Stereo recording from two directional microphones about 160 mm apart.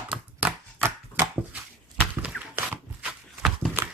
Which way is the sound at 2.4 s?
10° right (ahead or behind).